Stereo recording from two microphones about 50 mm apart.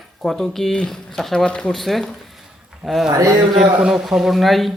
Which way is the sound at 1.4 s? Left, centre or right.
Centre.